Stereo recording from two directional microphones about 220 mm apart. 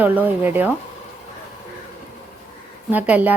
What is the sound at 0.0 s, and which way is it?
Speech, 10° right (ahead or behind).